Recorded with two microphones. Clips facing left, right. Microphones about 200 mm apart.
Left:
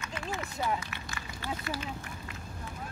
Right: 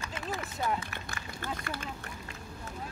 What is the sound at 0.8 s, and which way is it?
Speech, 50° right (ahead or behind).